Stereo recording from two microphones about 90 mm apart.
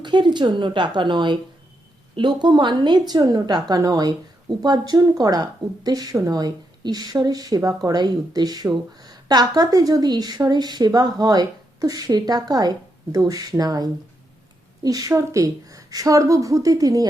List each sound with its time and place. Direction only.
0.0 s a woman's voice: 60° right (ahead or behind)